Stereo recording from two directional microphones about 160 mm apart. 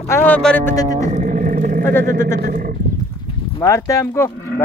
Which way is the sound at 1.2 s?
65° right (ahead or behind).